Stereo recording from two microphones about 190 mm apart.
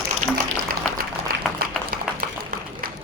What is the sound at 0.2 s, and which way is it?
Music, 40° right (ahead or behind).